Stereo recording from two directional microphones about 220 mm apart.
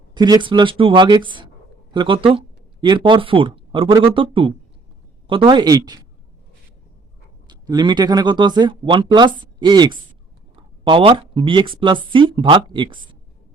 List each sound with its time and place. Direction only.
0.1 s speech: 20° right (ahead or behind)
7.4 s speech: 20° right (ahead or behind)